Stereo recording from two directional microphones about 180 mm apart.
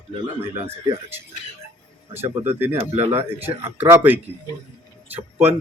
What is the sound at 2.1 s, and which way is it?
Speech, 10° right (ahead or behind).